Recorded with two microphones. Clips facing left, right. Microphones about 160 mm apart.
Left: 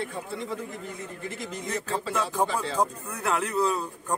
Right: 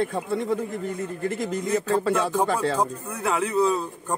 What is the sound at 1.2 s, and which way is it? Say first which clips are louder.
Speech: right 10 dB; 50° right (ahead or behind).